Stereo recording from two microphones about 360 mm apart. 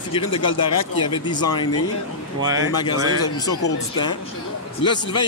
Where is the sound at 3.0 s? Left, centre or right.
Left.